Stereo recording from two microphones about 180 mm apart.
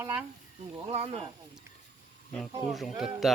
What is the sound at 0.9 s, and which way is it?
Speech, 30° right (ahead or behind).